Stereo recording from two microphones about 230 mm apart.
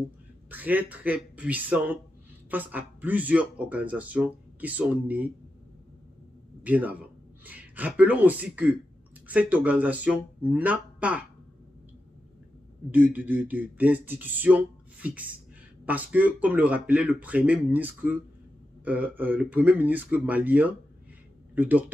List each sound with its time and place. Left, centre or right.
0.5 s speech: centre
6.6 s speech: centre
12.9 s speech: centre